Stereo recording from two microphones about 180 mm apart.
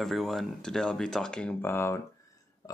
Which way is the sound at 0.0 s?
Centre (ahead or behind).